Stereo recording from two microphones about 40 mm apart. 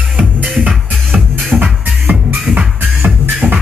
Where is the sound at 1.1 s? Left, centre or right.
Centre.